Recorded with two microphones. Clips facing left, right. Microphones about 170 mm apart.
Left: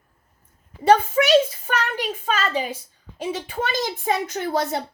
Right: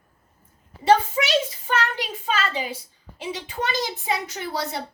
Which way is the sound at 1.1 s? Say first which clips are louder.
Left 7 dB; 50° left (ahead or behind).